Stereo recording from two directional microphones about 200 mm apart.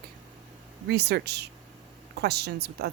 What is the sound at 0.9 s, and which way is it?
Speech, 55° right (ahead or behind).